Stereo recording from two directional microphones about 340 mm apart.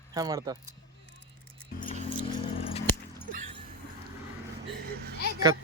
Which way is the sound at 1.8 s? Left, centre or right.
Centre.